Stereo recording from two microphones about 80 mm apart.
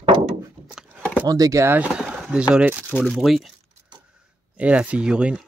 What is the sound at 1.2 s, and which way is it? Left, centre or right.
Speech, right.